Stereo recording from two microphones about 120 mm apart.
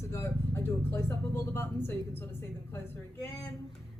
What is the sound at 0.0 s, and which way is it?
Speech, 25° left (ahead or behind).